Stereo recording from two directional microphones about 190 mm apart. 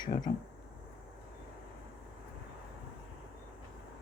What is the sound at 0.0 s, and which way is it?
Speech, 20° left (ahead or behind).